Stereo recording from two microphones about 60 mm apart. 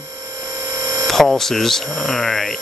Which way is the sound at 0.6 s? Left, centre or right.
Right.